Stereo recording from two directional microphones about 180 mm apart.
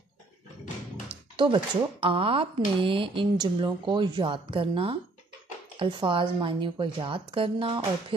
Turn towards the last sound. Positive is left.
turn(degrees=-30)  # may be behind; listen again after turning